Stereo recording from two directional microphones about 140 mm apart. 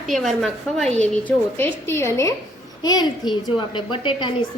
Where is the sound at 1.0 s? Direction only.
15° left (ahead or behind).